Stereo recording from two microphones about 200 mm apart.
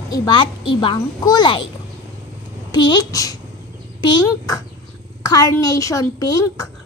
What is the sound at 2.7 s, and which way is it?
Speech, 20° left (ahead or behind).